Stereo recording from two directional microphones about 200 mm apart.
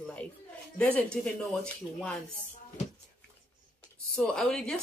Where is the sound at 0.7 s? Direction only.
5° left (ahead or behind).